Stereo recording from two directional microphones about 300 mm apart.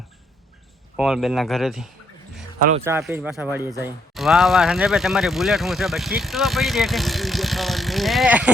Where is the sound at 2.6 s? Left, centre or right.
Right.